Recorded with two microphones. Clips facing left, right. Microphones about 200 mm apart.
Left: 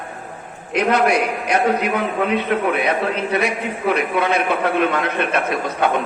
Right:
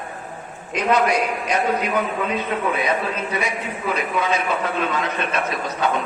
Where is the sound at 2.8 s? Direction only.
65° left (ahead or behind).